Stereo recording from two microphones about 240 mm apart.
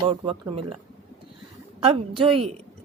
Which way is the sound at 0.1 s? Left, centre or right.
Right.